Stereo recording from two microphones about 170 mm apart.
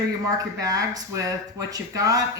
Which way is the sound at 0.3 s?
20° right (ahead or behind).